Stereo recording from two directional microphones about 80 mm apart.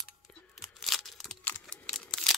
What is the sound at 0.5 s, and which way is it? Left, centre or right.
Tearing, centre.